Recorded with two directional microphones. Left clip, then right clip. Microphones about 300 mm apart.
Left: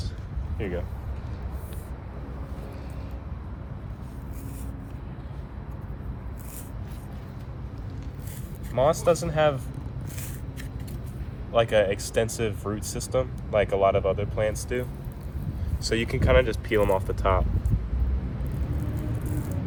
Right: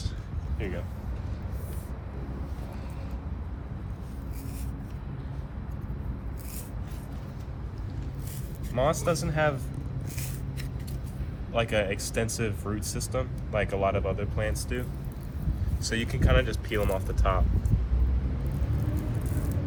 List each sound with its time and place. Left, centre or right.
0.6 s vehicle: left
8.7 s speech: centre
11.7 s speech: centre; by 17.4 s left